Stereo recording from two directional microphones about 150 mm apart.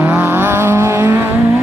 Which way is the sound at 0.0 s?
15° right (ahead or behind).